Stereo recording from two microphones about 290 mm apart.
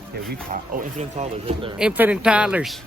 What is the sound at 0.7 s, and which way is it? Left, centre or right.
Speech, right.